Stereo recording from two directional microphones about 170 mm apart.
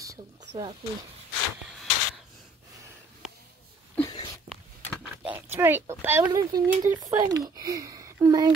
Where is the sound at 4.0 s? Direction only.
25° left (ahead or behind).